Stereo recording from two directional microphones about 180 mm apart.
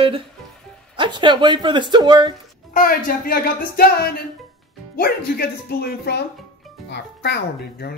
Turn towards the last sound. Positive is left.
turn(degrees=60)  # may be behind; listen again after turning